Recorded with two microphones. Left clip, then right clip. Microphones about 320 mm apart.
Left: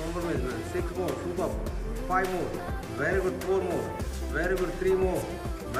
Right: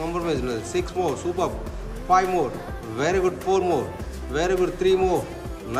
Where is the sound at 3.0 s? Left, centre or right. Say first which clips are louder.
Right 6 dB; centre.